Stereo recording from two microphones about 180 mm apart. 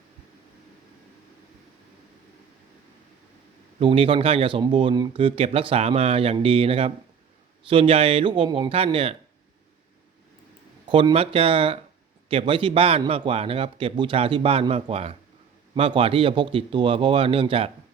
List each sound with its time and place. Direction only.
3.8 s speech: 30° right (ahead or behind)
10.8 s a man's voice: 30° right (ahead or behind)